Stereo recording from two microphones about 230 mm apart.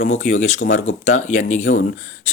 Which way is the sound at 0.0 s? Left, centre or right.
Left.